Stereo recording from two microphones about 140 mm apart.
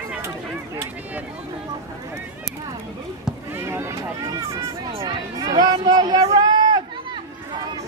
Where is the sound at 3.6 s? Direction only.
20° right (ahead or behind).